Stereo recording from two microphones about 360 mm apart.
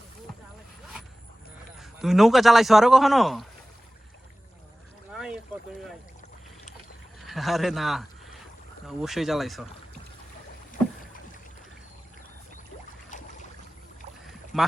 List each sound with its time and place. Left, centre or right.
1.8 s a man's voice: centre
5.1 s boat: centre
7.2 s a man's voice: centre
13.1 s boat: centre
14.5 s speech: centre